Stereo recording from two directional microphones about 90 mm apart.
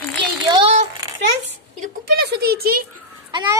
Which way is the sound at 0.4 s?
70° right (ahead or behind).